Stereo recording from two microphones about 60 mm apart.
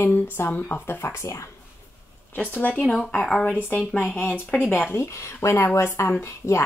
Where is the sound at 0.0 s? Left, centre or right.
Left.